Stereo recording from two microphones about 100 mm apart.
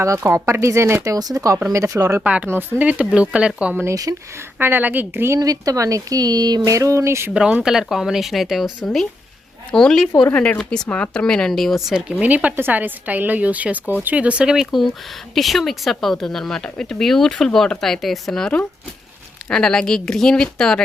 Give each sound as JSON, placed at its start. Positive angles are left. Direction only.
{"t": 0.2, "sound": "speech", "side_deg": -30}
{"t": 2.2, "sound": "speech", "side_deg": -15}
{"t": 3.8, "sound": "speech", "side_deg": -35}
{"t": 4.5, "sound": "speech", "side_deg": -20}
{"t": 5.4, "sound": "speech", "side_deg": -40}
{"t": 7.3, "sound": "speech", "side_deg": -10}
{"t": 10.3, "sound": "speech", "side_deg": 15}